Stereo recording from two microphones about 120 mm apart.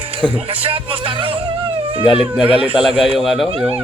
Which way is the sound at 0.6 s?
50° right (ahead or behind).